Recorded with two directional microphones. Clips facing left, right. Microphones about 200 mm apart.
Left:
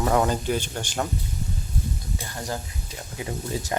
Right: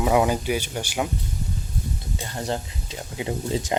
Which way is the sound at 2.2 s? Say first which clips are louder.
Right 6 dB; 25° right (ahead or behind).